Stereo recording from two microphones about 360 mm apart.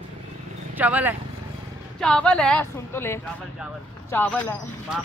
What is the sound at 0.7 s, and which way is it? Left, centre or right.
A woman's voice, centre.